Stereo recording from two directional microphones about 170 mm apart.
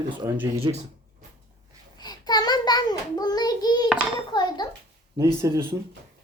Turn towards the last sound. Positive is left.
turn(degrees=-15)  # may be behind; listen again after turning